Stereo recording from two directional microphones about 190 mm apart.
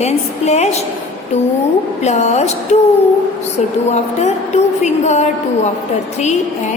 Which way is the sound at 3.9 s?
35° left (ahead or behind).